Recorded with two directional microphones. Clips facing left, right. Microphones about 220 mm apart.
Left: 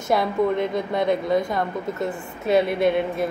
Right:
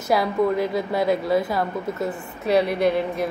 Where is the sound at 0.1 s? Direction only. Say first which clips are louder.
Even; centre (ahead or behind).